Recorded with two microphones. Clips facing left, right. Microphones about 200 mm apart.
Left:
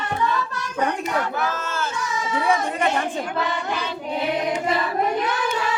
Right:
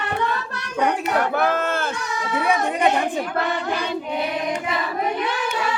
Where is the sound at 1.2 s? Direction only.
60° right (ahead or behind).